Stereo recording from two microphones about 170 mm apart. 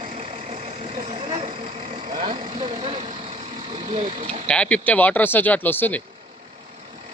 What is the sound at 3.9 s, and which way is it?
Vehicle, 35° right (ahead or behind).